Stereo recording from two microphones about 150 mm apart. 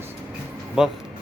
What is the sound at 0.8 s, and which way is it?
Speech, 5° right (ahead or behind).